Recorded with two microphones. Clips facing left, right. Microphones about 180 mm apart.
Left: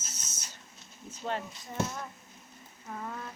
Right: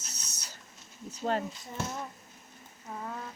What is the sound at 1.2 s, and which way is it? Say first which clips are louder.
Speech: right 4 dB; 40° right (ahead or behind).